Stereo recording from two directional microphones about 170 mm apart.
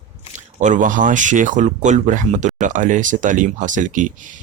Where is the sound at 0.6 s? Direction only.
45° right (ahead or behind).